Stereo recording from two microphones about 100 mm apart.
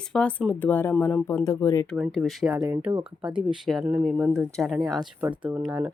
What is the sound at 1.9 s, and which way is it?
Speech, 5° right (ahead or behind).